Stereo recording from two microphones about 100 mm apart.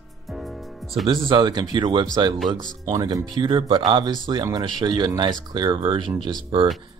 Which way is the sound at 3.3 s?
50° right (ahead or behind).